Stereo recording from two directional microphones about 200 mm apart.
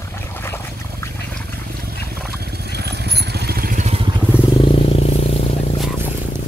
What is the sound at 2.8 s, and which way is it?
Vehicle, 55° right (ahead or behind).